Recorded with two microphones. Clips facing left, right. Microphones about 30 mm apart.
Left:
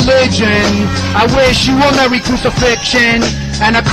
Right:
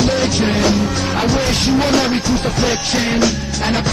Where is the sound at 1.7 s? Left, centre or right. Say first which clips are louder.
Left 5 dB; left.